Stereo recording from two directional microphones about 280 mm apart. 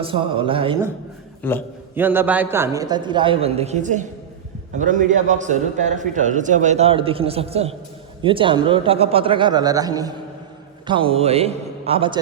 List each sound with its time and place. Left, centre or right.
0.0 s a man's voice: centre
1.4 s a man's voice: centre
2.0 s a man's voice: centre